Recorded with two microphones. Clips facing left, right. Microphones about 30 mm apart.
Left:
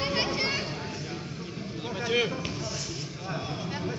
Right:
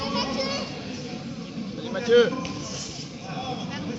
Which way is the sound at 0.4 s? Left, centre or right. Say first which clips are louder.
Right 1 dB; left.